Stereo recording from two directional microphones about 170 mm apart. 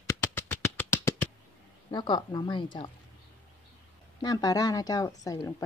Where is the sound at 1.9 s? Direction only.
25° left (ahead or behind).